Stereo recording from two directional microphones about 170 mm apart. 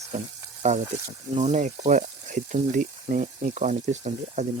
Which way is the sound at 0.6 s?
45° right (ahead or behind).